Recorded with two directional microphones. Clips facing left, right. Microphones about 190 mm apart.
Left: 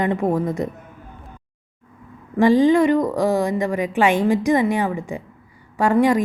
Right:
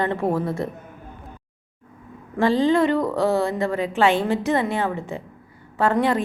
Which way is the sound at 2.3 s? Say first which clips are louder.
Left 4 dB; 15° left (ahead or behind).